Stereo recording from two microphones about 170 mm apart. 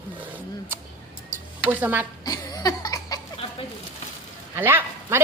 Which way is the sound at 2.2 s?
20° left (ahead or behind).